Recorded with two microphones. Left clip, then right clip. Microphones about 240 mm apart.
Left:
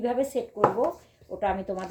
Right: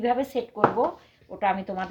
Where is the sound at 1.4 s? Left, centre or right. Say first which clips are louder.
Right 3 dB; right.